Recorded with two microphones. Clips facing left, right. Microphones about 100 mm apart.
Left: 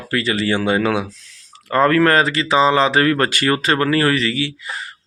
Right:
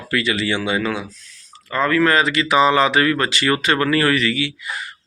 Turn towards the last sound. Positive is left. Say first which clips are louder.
# left 1 dB
turn(degrees=35)  # may be behind; listen again after turning